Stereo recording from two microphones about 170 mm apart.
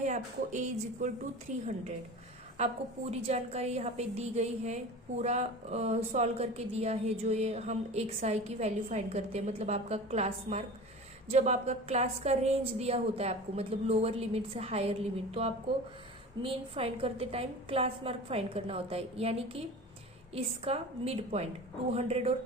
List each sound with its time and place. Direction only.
0.0 s speech: 45° right (ahead or behind)
2.6 s speech: 40° right (ahead or behind)